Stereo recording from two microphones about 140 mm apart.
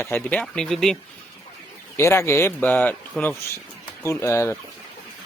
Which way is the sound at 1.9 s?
20° left (ahead or behind).